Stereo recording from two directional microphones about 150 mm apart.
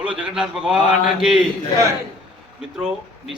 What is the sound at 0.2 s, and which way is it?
A man's voice, 5° right (ahead or behind).